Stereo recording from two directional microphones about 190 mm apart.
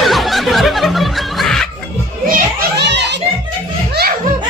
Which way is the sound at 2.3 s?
55° right (ahead or behind).